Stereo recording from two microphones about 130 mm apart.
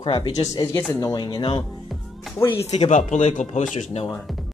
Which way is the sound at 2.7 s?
60° left (ahead or behind).